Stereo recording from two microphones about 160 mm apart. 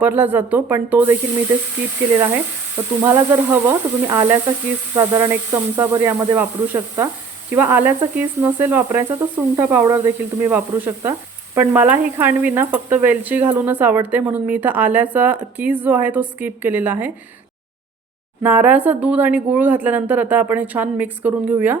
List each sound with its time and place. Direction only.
0.0 s speech: 10° right (ahead or behind)
3.0 s speech: 15° right (ahead or behind)
18.4 s speech: 10° right (ahead or behind)